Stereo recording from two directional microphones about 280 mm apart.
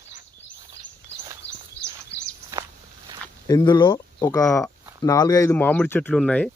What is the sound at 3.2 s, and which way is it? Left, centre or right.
Speech, centre.